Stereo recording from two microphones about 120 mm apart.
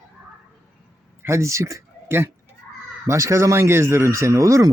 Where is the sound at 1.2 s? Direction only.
25° right (ahead or behind).